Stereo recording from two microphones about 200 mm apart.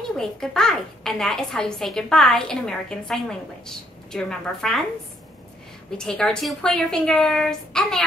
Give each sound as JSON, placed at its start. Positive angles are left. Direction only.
{"t": 0.2, "sound": "a child's voice", "side_deg": 5}
{"t": 5.9, "sound": "a child's voice", "side_deg": 5}